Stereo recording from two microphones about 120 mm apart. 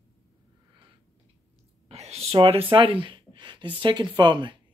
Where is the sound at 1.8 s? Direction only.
60° right (ahead or behind); by 3.7 s 40° right (ahead or behind).